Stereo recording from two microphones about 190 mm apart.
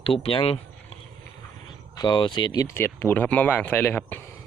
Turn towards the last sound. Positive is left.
turn(degrees=10)  # may be behind; listen again after turning